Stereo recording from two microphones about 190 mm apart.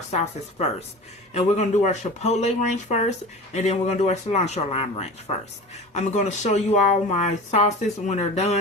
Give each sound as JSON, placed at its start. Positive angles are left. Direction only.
{"t": 0.1, "sound": "a woman's voice", "side_deg": 35}